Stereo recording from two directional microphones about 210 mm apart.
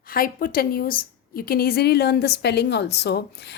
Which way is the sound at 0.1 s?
45° left (ahead or behind).